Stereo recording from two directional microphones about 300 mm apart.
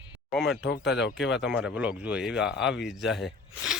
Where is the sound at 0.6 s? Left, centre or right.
Left.